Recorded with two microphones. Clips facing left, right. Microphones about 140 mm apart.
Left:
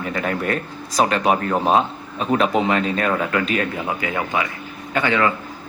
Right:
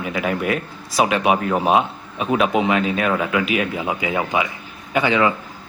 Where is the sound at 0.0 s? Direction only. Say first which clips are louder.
Right 1 dB; 5° right (ahead or behind).